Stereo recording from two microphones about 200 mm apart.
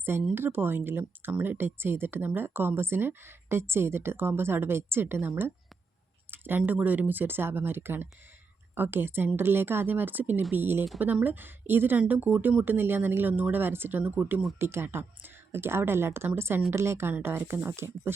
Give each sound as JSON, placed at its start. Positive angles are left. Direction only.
{"t": 0.0, "sound": "speech", "side_deg": -10}